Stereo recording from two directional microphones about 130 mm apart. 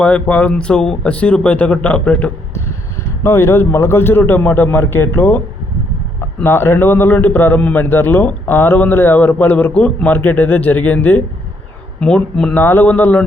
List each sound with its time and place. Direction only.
0.0 s a man's voice: 10° left (ahead or behind)
6.4 s a man's voice: 20° left (ahead or behind)